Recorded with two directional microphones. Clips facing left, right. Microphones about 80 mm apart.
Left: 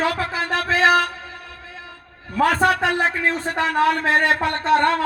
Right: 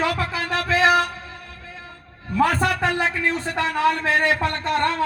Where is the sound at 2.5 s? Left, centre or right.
Left.